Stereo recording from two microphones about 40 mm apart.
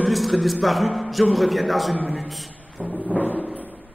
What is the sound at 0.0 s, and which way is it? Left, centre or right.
A man's voice, centre.